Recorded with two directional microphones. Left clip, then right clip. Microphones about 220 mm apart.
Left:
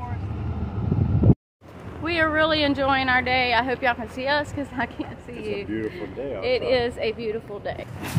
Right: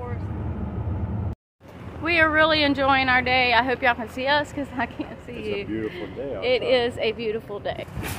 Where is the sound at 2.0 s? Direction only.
15° right (ahead or behind).